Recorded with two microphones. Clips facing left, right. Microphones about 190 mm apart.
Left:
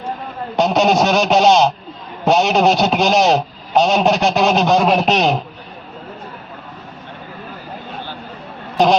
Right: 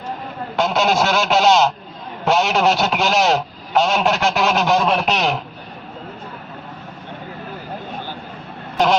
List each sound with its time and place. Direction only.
0.5 s a man's voice: 20° left (ahead or behind)